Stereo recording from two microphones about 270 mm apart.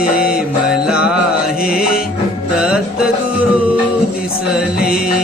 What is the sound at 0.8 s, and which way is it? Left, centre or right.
Music, centre.